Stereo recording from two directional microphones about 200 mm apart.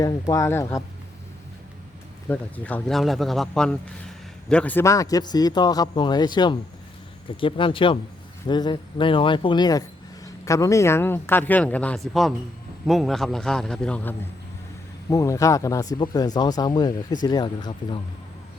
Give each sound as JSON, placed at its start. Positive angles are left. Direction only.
{"t": 0.0, "sound": "speech", "side_deg": 15}
{"t": 2.3, "sound": "speech", "side_deg": 5}